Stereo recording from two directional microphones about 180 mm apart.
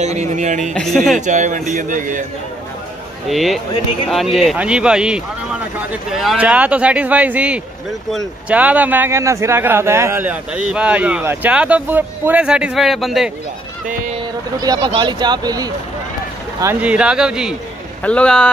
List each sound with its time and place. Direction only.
0.0 s speech: 40° right (ahead or behind)
0.7 s a man's voice: centre (ahead or behind)
1.1 s speech: 45° right (ahead or behind)
3.3 s a man's voice: centre (ahead or behind)
14.6 s speech: 20° right (ahead or behind)
16.8 s a man's voice: 5° right (ahead or behind)